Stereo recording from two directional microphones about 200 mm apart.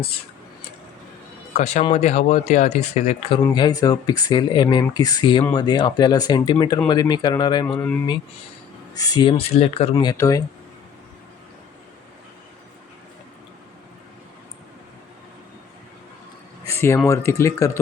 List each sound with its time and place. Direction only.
1.5 s speech: 35° left (ahead or behind)
3.5 s speech: 20° left (ahead or behind)
9.0 s speech: 20° left (ahead or behind)
9.9 s speech: 20° left (ahead or behind)
16.6 s a sound: 15° left (ahead or behind)
17.1 s speech: 15° left (ahead or behind)